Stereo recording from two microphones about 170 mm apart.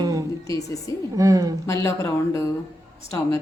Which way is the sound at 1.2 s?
20° right (ahead or behind).